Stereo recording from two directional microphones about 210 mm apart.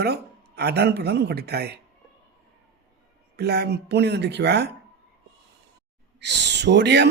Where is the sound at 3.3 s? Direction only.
50° right (ahead or behind).